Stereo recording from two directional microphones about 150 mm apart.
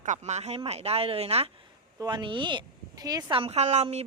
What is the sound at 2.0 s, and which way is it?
Speech, 30° right (ahead or behind).